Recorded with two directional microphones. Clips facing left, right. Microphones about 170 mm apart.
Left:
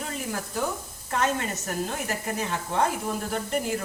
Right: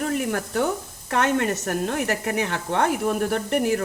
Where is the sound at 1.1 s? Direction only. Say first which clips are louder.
Right 5 dB; 65° right (ahead or behind).